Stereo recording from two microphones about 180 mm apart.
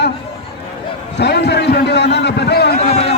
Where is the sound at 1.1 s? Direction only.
65° left (ahead or behind).